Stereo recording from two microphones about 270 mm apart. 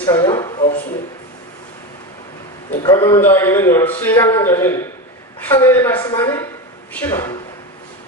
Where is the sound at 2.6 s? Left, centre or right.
Centre.